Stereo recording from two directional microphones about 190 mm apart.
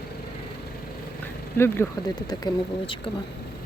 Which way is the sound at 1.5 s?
10° left (ahead or behind).